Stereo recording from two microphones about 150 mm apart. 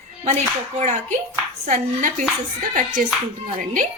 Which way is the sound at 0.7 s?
50° right (ahead or behind).